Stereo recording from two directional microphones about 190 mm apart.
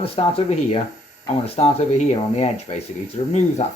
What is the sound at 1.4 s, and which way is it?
Speech, 30° left (ahead or behind).